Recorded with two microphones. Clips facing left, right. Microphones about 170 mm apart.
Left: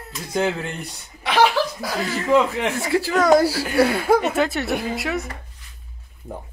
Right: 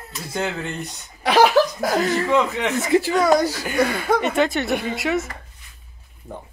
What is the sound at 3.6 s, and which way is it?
Speech, 5° left (ahead or behind).